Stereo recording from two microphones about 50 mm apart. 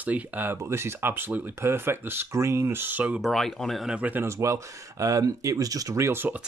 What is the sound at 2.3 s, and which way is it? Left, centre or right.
Speech, right.